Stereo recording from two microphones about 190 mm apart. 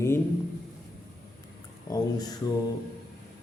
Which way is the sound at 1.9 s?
20° left (ahead or behind).